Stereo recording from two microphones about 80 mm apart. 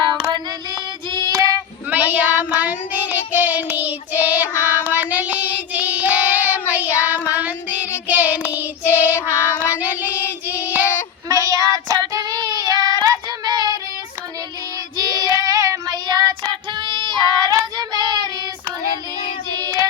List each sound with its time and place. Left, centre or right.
0.0 s child singing: right
0.7 s child singing: right
1.9 s child singing: right
11.3 s child singing: right
14.9 s child singing: right
19.6 s child singing: right